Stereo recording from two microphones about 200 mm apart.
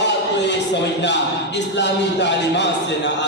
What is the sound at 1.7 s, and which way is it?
Speech, 60° left (ahead or behind).